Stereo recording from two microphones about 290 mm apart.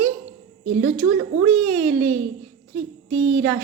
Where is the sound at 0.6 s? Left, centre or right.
Right.